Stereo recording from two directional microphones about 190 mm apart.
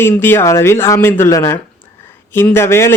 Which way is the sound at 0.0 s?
10° left (ahead or behind).